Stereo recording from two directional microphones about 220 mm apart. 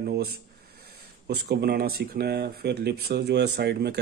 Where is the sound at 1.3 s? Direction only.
45° right (ahead or behind).